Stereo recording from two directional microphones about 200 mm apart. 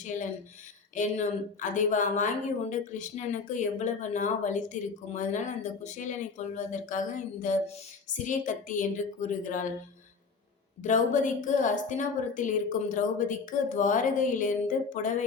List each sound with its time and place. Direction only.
1.0 s a woman's voice: 40° left (ahead or behind)
10.8 s a woman's voice: 40° left (ahead or behind)